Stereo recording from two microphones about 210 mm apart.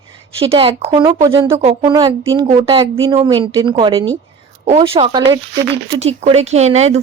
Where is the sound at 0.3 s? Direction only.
25° right (ahead or behind).